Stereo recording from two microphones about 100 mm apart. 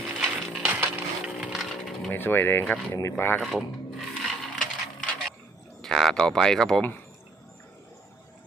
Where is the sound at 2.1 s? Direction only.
20° left (ahead or behind).